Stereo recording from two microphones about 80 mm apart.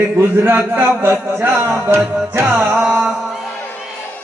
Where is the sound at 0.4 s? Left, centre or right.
Right.